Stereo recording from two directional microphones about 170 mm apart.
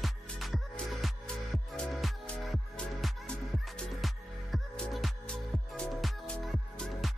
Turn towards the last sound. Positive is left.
turn(degrees=5)  # may be behind; listen again after turning